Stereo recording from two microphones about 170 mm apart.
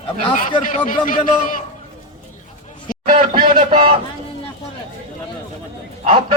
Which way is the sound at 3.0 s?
50° right (ahead or behind).